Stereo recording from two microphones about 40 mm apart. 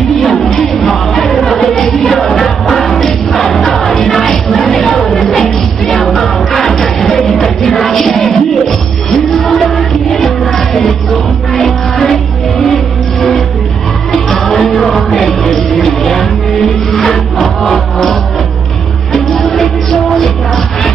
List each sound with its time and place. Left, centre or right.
0.2 s music: centre
5.3 s music: centre
5.9 s music: centre
10.2 s music: centre
14.3 s music: centre
19.1 s music: centre